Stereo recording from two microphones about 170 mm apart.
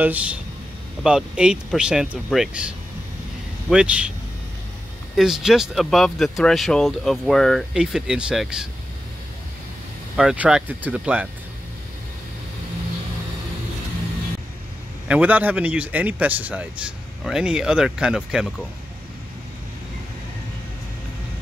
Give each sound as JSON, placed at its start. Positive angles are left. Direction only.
{"t": 0.0, "sound": "a man's voice", "side_deg": -10}
{"t": 3.7, "sound": "a man's voice", "side_deg": -5}
{"t": 5.1, "sound": "speech", "side_deg": -5}
{"t": 10.1, "sound": "a man's voice", "side_deg": -5}
{"t": 15.0, "sound": "a man's voice", "side_deg": -10}